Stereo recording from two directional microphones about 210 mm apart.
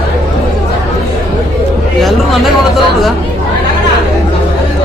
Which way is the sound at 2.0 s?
Centre (ahead or behind).